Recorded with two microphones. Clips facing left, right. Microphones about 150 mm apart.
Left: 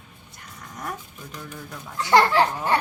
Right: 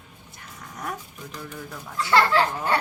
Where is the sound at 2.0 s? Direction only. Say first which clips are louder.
Left 2 dB; 15° left (ahead or behind).